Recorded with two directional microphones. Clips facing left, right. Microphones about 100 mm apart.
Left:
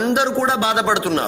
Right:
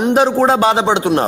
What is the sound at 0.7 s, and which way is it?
Speech, 25° right (ahead or behind).